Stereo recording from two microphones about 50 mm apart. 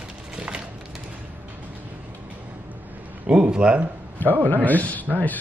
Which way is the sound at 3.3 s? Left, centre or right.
Right.